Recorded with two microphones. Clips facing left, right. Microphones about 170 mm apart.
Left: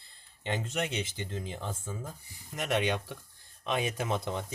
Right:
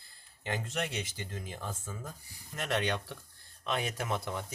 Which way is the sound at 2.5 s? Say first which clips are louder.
Left 3 dB; 15° left (ahead or behind).